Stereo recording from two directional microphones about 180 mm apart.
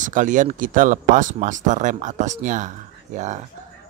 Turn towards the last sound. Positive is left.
turn(degrees=-40)  # may be behind; listen again after turning